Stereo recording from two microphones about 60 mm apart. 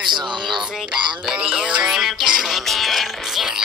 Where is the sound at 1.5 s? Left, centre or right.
Centre.